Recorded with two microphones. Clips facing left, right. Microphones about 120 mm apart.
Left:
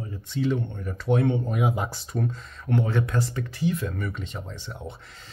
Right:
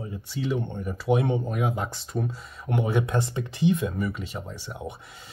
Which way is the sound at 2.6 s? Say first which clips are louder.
Even; 15° right (ahead or behind).